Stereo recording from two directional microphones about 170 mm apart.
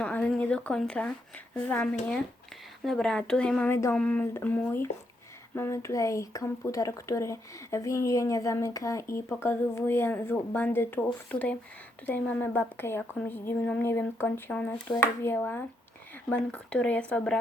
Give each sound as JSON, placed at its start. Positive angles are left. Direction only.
{"t": 0.0, "sound": "speech", "side_deg": 5}